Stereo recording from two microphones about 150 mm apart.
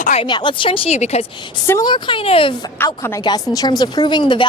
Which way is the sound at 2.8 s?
15° left (ahead or behind).